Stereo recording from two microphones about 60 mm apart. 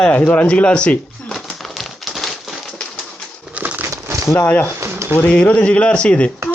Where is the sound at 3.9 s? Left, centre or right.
Right.